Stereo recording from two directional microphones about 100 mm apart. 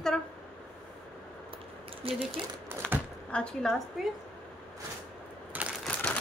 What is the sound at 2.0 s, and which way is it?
Speech, 70° right (ahead or behind).